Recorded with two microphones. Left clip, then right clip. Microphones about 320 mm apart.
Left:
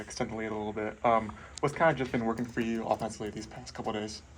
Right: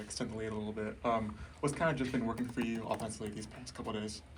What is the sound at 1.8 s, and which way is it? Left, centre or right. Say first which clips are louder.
Speech: left 8 dB; left.